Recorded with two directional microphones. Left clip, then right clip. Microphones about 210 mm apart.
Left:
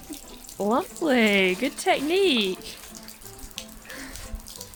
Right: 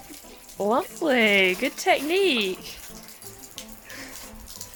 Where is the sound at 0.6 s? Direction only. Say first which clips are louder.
Right 1 dB; 5° right (ahead or behind).